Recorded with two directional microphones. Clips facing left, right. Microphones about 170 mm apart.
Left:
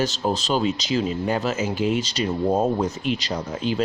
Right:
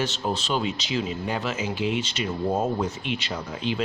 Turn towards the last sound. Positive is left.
turn(degrees=40)  # may be behind; listen again after turning